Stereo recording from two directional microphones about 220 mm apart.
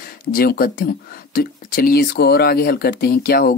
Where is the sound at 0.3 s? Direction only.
40° left (ahead or behind).